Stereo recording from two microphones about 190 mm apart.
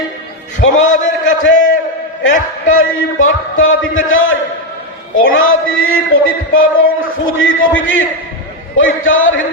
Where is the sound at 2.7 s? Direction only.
90° left.